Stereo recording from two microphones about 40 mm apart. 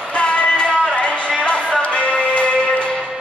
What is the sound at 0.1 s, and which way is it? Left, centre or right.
Music, left.